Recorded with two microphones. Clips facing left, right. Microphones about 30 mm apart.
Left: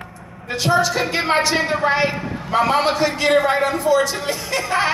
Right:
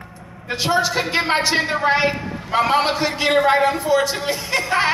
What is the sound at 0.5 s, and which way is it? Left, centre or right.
A man's voice, centre.